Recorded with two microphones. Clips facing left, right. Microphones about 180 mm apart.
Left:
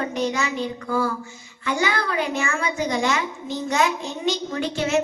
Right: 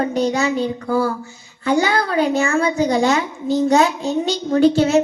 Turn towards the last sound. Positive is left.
turn(degrees=-35)  # may be behind; listen again after turning